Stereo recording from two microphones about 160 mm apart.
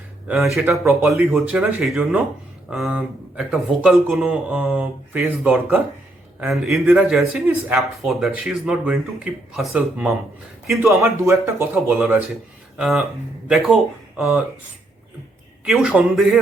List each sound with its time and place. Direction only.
0.3 s speech: centre (ahead or behind)
0.7 s speech: 15° right (ahead or behind)
6.4 s speech: centre (ahead or behind)
10.8 s speech: 15° right (ahead or behind)
15.6 s speech: centre (ahead or behind)